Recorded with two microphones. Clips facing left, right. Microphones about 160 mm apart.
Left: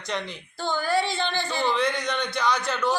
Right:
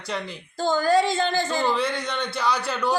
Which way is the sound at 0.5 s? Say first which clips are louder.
Right 5 dB; 40° right (ahead or behind).